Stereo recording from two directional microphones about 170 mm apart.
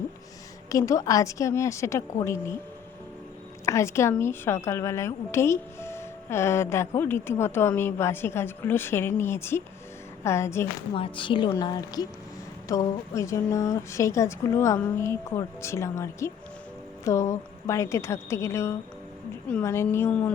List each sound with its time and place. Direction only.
0.7 s a woman's voice: 20° left (ahead or behind)
3.7 s a woman's voice: 15° left (ahead or behind)
10.9 s a woman's voice: 30° left (ahead or behind); by 20.3 s 10° left (ahead or behind)